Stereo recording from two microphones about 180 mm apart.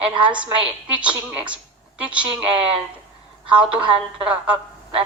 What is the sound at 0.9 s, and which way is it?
Speech, 10° right (ahead or behind).